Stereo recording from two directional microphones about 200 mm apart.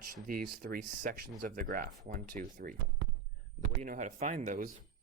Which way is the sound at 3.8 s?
40° right (ahead or behind).